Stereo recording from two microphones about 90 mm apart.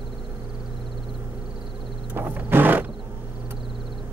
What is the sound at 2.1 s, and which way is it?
Wild animals, 20° right (ahead or behind).